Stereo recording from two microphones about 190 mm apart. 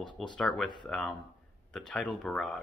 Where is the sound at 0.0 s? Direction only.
25° left (ahead or behind).